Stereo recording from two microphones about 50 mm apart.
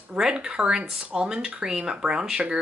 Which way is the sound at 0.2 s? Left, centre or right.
Centre.